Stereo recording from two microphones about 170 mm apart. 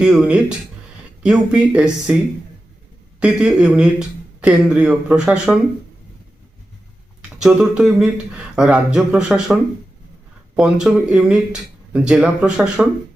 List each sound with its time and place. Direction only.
0.0 s speech: 5° right (ahead or behind)
3.2 s speech: 5° right (ahead or behind)
7.2 s speech: 5° right (ahead or behind)